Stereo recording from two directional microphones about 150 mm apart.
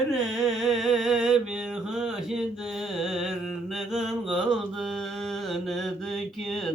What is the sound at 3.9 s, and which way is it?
Mantra, centre (ahead or behind).